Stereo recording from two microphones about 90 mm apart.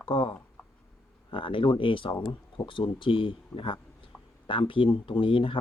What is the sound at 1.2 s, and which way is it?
Speech, 75° left (ahead or behind).